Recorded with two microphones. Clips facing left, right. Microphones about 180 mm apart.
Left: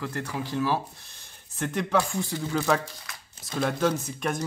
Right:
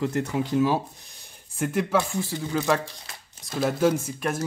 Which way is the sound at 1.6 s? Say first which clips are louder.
Right 2 dB; 5° right (ahead or behind).